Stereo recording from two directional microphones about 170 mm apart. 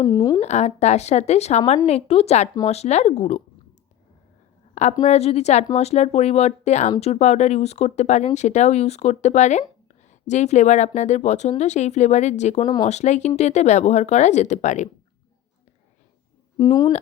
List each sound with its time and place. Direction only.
0.0 s speech: 20° left (ahead or behind)
0.4 s a woman's voice: 40° left (ahead or behind)
4.7 s a sound: 45° left (ahead or behind)
5.0 s a woman's voice: 40° left (ahead or behind)
16.6 s speech: 25° left (ahead or behind)